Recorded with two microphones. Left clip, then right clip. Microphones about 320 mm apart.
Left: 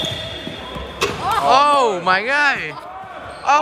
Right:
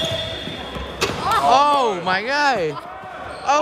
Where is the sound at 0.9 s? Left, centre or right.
Centre.